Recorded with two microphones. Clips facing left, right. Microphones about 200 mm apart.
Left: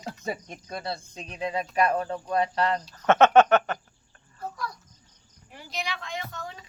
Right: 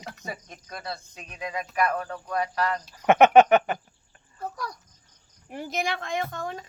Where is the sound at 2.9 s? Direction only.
15° right (ahead or behind).